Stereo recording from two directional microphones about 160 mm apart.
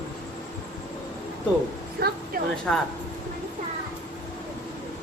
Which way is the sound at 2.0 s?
85° right.